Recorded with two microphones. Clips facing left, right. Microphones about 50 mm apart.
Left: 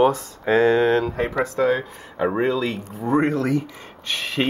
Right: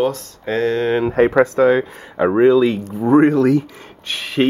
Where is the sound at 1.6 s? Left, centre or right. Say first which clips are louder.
Right 6 dB; right.